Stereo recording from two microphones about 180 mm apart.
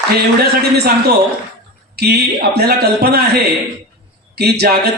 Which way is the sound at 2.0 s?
60° right (ahead or behind).